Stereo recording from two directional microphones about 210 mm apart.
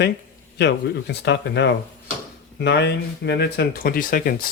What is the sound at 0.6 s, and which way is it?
Speech, 55° left (ahead or behind).